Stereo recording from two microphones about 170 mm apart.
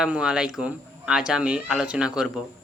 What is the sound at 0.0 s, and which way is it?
Speech, 5° right (ahead or behind).